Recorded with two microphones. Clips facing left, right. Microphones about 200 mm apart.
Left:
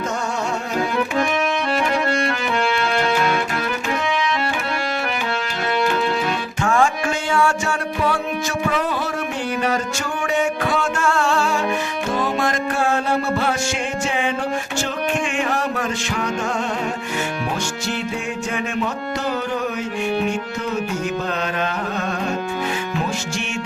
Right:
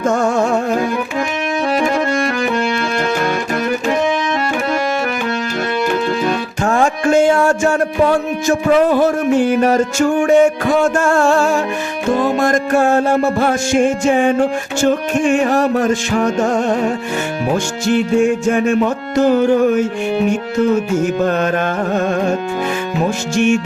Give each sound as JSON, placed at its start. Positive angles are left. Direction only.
{"t": 0.0, "sound": "music", "side_deg": -50}
{"t": 1.8, "sound": "music", "side_deg": -45}
{"t": 6.6, "sound": "music", "side_deg": -40}
{"t": 17.8, "sound": "music", "side_deg": -50}
{"t": 21.0, "sound": "music", "side_deg": -50}